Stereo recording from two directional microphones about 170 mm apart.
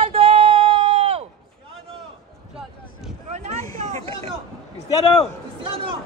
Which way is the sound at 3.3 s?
40° right (ahead or behind).